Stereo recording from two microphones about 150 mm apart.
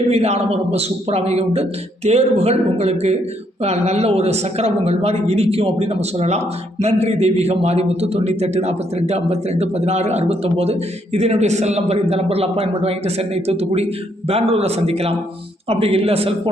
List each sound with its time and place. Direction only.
0.1 s a man's voice: 45° right (ahead or behind)